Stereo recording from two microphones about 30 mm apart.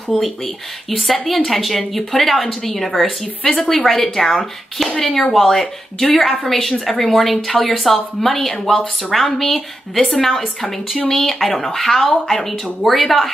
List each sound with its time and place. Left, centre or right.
0.1 s speech: centre
0.8 s a woman's voice: centre
11.1 s speech: left
11.3 s a woman's voice: centre